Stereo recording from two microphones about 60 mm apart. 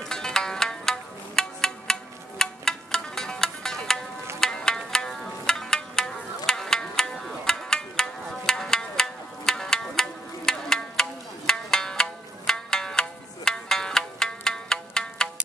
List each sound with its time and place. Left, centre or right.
0.0 s music: centre